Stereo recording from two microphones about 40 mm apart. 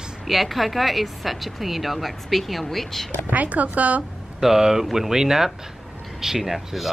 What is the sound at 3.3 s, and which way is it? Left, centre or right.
Speech, right.